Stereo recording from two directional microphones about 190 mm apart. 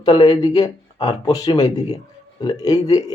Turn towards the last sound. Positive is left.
turn(degrees=20)  # may be behind; listen again after turning